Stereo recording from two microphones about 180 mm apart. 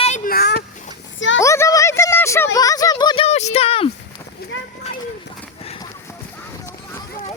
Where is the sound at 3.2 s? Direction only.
35° left (ahead or behind).